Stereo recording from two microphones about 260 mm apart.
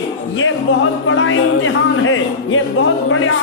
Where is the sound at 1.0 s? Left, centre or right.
Left.